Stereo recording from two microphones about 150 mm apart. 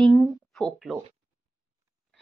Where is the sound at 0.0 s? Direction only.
5° left (ahead or behind).